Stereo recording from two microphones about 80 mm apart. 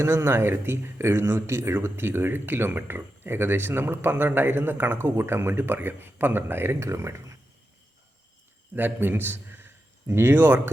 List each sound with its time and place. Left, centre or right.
0.0 s speech: right
8.7 s a man's voice: right